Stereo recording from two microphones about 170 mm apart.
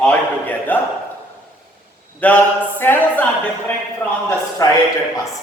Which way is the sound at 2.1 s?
10° left (ahead or behind).